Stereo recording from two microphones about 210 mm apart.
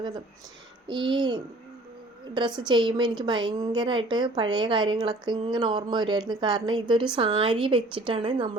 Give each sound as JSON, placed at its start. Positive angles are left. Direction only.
{"t": 0.9, "sound": "a woman's voice", "side_deg": -20}